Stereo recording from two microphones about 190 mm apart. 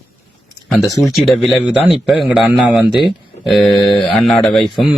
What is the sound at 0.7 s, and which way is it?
Speech, centre (ahead or behind).